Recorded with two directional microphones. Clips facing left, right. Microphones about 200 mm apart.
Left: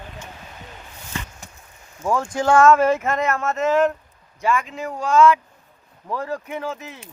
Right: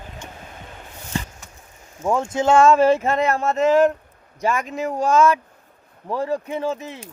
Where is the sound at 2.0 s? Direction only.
25° right (ahead or behind).